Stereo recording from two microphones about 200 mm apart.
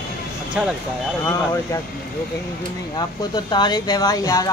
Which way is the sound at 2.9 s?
20° left (ahead or behind).